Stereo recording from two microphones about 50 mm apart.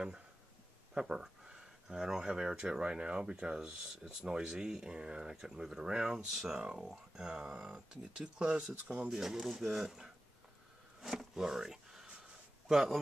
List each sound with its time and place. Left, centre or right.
0.9 s speech: centre
9.2 s speech: centre
11.0 s a sound: centre
12.6 s speech: centre